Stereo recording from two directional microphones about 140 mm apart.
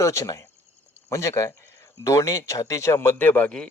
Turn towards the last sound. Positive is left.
turn(degrees=10)  # may be behind; listen again after turning